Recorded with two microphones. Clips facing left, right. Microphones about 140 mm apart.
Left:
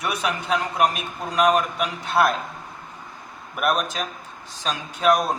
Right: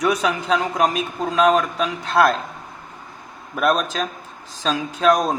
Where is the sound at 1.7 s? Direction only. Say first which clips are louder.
Right 3 dB; 90° right.